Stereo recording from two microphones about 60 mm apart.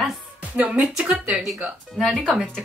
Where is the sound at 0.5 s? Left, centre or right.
Right.